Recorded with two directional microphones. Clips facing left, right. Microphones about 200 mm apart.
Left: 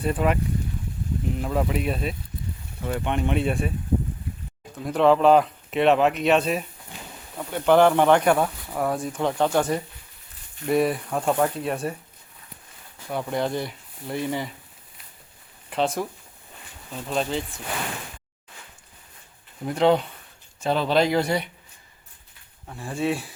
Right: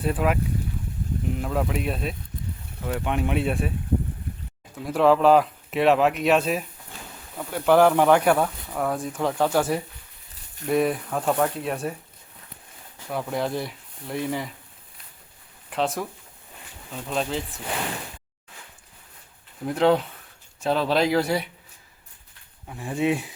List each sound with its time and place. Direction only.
0.0 s speech: centre (ahead or behind)
1.4 s speech: centre (ahead or behind)
4.8 s speech: 5° right (ahead or behind)
6.9 s a sound: 15° left (ahead or behind)
7.3 s speech: centre (ahead or behind)
13.1 s speech: centre (ahead or behind)
15.7 s speech: centre (ahead or behind)
19.6 s speech: centre (ahead or behind)
22.6 s speech: 15° right (ahead or behind)